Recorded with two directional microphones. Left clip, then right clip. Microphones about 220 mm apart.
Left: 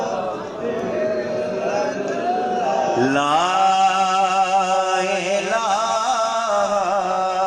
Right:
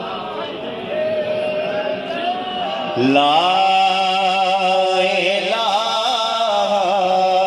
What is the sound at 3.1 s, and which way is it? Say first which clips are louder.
Mantra: right 4 dB; 30° right (ahead or behind).